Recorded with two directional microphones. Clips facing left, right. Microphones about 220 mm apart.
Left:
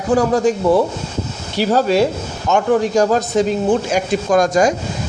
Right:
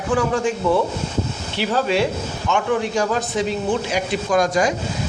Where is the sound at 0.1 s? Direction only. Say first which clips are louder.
Left 6 dB; 40° left (ahead or behind).